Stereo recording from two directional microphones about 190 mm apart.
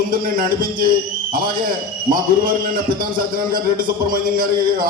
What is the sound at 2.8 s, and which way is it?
Speech, 25° right (ahead or behind).